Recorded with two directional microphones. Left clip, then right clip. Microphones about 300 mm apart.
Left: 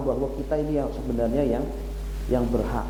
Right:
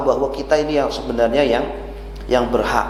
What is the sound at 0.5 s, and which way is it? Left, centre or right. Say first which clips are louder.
A man's voice: right 9 dB; centre.